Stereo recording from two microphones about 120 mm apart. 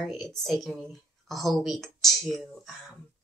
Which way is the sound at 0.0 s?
Centre (ahead or behind).